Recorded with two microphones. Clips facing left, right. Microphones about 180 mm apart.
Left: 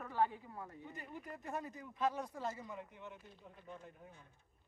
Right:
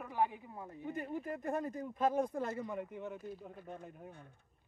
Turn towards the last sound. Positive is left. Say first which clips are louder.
# right 6 dB
turn(degrees=-55)  # may be behind; listen again after turning